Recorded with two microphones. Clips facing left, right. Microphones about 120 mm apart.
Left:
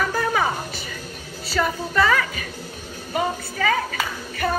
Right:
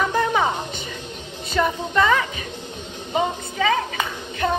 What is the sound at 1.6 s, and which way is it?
A woman's voice, 20° right (ahead or behind).